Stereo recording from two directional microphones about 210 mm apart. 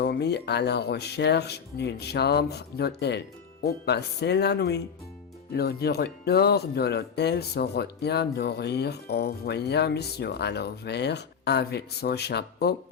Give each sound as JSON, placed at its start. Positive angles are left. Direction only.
{"t": 0.0, "sound": "speech", "side_deg": 50}